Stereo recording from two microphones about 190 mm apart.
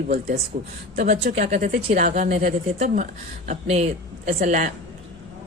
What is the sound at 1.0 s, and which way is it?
Speech, 55° right (ahead or behind).